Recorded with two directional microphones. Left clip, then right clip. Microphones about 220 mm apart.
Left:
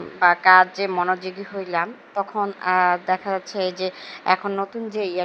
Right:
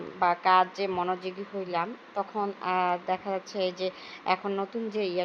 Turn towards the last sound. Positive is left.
turn(degrees=20)  # may be behind; listen again after turning